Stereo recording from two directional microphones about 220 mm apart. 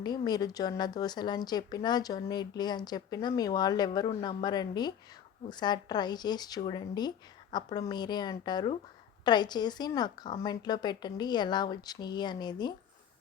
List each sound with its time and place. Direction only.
0.0 s a woman's voice: 20° left (ahead or behind)